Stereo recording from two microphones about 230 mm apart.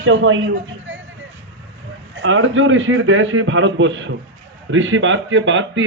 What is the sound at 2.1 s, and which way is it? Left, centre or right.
A woman's voice, right.